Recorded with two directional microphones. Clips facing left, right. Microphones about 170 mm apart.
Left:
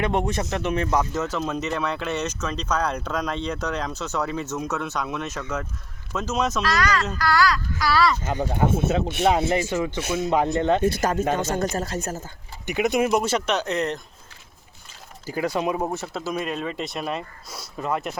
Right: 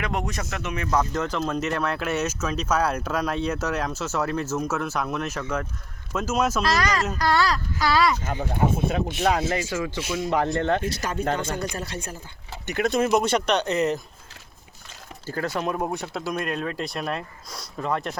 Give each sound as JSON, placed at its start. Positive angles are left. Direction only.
{"t": 0.0, "sound": "speech", "side_deg": 30}
{"t": 0.9, "sound": "speech", "side_deg": 5}
{"t": 6.6, "sound": "speech", "side_deg": -35}
{"t": 9.5, "sound": "speech", "side_deg": 20}
{"t": 10.8, "sound": "speech", "side_deg": 50}
{"t": 12.6, "sound": "speech", "side_deg": 15}
{"t": 15.3, "sound": "speech", "side_deg": 10}